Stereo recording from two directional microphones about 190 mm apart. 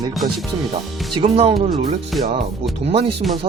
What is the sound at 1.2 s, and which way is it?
Speech, 30° right (ahead or behind).